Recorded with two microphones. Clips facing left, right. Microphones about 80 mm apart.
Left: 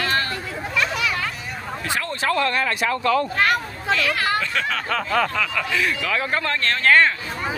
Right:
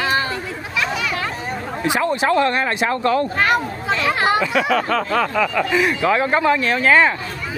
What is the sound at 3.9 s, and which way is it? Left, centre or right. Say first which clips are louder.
Speech: right 3 dB; right.